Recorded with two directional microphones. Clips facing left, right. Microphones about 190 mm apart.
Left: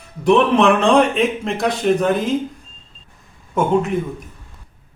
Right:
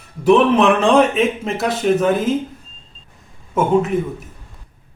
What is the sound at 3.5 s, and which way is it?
Speech, 5° right (ahead or behind).